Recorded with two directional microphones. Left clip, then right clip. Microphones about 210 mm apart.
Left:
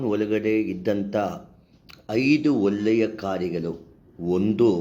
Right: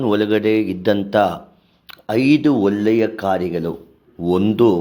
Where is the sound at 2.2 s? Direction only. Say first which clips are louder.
Right 5 dB; 50° right (ahead or behind).